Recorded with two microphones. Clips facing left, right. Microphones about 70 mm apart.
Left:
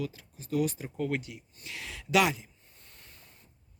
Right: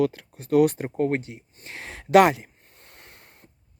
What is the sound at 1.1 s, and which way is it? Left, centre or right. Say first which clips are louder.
Speech: right 6 dB; right.